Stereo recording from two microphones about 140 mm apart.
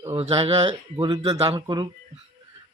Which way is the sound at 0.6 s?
35° right (ahead or behind).